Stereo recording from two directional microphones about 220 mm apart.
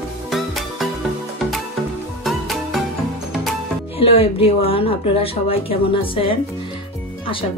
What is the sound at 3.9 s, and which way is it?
A woman's voice, 25° left (ahead or behind).